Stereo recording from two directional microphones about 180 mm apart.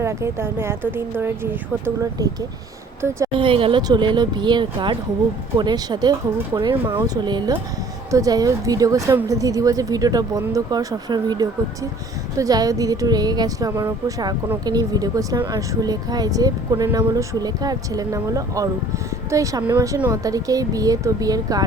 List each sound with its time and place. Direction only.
0.0 s speech: 15° right (ahead or behind)
3.3 s speech: 30° right (ahead or behind)